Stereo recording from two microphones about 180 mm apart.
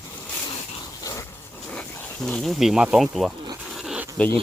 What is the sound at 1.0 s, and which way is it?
Dog, 20° left (ahead or behind).